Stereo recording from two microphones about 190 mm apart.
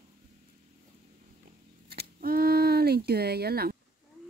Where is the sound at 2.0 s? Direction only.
50° right (ahead or behind).